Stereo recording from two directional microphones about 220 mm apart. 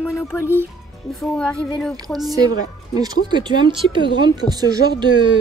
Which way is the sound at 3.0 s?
20° right (ahead or behind).